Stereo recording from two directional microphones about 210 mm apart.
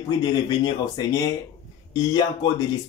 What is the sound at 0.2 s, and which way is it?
Speech, 20° left (ahead or behind).